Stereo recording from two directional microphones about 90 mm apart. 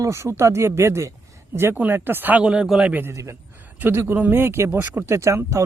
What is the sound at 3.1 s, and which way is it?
Speech, 35° right (ahead or behind).